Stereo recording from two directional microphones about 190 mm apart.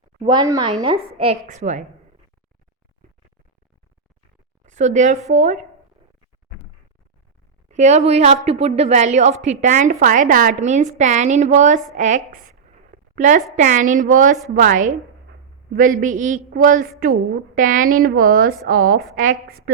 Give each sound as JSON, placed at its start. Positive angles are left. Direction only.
{"t": 0.2, "sound": "a woman's voice", "side_deg": -25}
{"t": 4.6, "sound": "a woman's voice", "side_deg": -40}
{"t": 7.7, "sound": "a woman's voice", "side_deg": -40}